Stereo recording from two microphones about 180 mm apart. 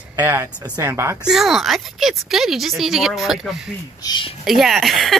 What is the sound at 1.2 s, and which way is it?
Speech, centre (ahead or behind).